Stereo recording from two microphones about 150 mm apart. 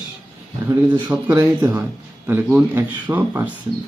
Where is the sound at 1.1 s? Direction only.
10° right (ahead or behind).